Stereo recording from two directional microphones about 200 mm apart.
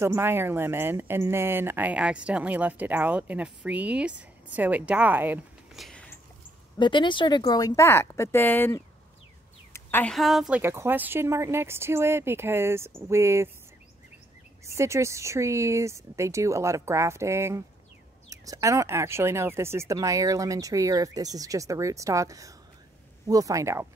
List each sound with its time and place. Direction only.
0.0 s speech: 10° right (ahead or behind)
6.8 s speech: 25° left (ahead or behind); by 10.6 s centre (ahead or behind)
10.6 s speech: 10° right (ahead or behind)
14.7 s speech: 15° right (ahead or behind)